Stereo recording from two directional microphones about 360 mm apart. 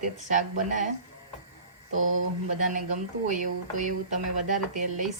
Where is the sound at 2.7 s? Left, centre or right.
Right.